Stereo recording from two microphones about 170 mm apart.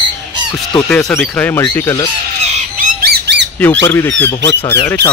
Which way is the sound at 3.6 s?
10° left (ahead or behind).